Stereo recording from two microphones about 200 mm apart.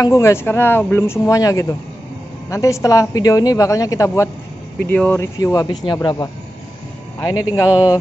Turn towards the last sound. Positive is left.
turn(degrees=15)  # may be behind; listen again after turning